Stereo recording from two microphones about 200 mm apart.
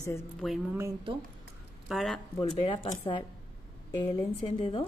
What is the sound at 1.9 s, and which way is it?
Speech, centre (ahead or behind).